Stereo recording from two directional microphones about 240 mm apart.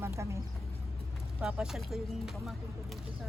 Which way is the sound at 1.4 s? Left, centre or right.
Centre.